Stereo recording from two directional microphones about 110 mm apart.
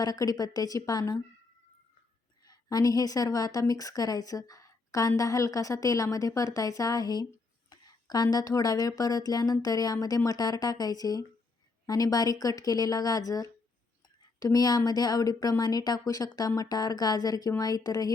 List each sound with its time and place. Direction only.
0.0 s a woman's voice: 35° left (ahead or behind)
2.5 s a woman's voice: 35° left (ahead or behind)